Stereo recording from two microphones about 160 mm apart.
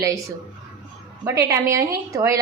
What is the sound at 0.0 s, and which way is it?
A woman's voice, 20° right (ahead or behind).